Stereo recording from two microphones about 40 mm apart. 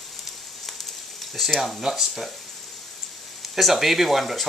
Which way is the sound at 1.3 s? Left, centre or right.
Centre.